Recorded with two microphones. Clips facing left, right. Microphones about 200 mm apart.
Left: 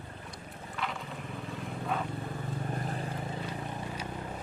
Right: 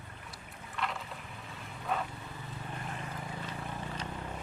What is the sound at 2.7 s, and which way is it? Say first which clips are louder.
Vehicle: left 6 dB; 35° left (ahead or behind).